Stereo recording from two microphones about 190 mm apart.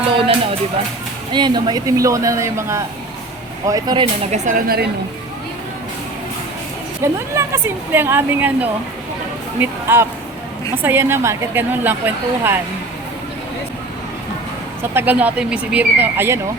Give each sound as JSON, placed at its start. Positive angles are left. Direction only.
{"t": 1.3, "sound": "a woman's voice", "side_deg": -25}
{"t": 4.0, "sound": "a woman's voice", "side_deg": -40}
{"t": 7.0, "sound": "a woman's voice", "side_deg": -15}
{"t": 14.9, "sound": "a woman's voice", "side_deg": -10}